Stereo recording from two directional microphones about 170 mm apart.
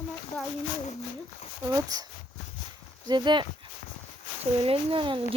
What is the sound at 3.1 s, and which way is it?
Speech, 25° right (ahead or behind).